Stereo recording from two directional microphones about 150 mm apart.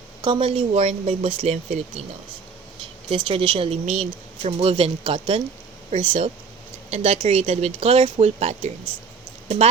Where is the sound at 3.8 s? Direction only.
50° right (ahead or behind).